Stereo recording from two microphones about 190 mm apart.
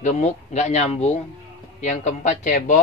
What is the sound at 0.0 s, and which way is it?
A man's voice, 35° left (ahead or behind).